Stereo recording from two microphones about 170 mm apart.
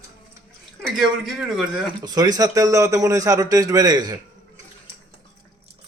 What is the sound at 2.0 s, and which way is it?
A man's voice, 20° right (ahead or behind).